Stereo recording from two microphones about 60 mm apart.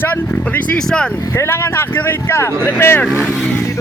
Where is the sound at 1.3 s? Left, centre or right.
Left.